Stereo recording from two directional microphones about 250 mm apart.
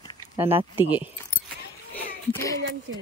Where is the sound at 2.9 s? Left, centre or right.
Right.